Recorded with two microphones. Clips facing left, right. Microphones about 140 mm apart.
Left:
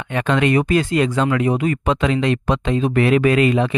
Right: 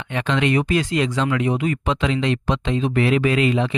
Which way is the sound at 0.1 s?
50° left (ahead or behind).